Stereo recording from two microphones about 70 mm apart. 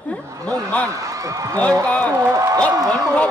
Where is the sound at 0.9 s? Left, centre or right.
Right.